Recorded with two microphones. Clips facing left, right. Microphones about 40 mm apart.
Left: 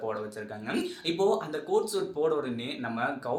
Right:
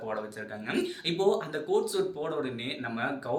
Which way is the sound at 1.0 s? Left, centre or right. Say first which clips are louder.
Left 1 dB; right.